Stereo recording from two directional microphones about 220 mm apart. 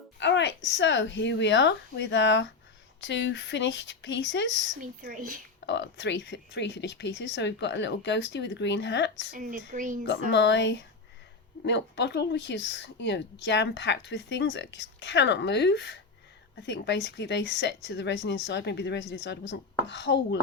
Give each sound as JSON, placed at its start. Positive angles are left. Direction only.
{"t": 0.2, "sound": "speech", "side_deg": 55}
{"t": 4.8, "sound": "speech", "side_deg": -40}
{"t": 5.6, "sound": "speech", "side_deg": 55}
{"t": 9.3, "sound": "speech", "side_deg": -35}
{"t": 10.3, "sound": "speech", "side_deg": 55}